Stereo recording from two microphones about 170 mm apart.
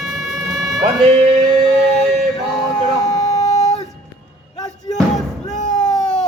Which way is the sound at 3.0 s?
40° left (ahead or behind).